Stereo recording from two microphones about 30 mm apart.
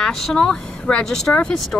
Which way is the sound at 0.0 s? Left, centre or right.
Centre.